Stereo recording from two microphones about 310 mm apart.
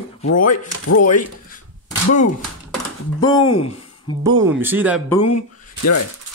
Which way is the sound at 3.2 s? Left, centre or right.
Centre.